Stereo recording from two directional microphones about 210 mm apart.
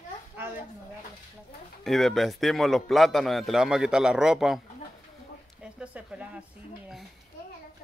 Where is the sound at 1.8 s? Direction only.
Centre (ahead or behind).